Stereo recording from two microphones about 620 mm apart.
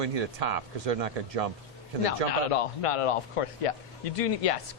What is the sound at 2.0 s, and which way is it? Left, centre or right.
Speech, left.